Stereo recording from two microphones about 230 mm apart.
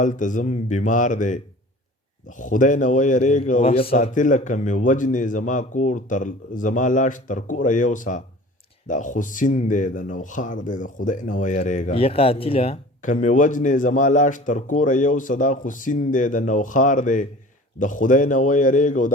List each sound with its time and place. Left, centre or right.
0.0 s speech: left